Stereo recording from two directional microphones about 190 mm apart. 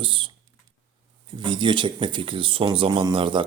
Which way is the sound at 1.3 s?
25° right (ahead or behind).